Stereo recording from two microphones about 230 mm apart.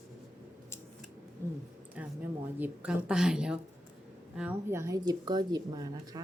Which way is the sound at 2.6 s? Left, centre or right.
Centre.